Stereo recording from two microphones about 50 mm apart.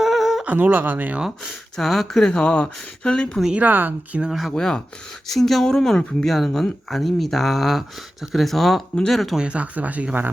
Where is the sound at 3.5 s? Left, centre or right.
Right.